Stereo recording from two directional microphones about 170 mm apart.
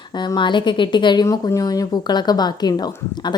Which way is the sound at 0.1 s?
25° left (ahead or behind).